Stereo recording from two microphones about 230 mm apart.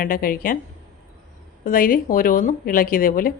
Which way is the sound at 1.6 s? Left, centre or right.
Left.